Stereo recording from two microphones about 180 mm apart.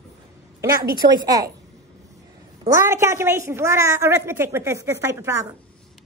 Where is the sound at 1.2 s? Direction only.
20° right (ahead or behind).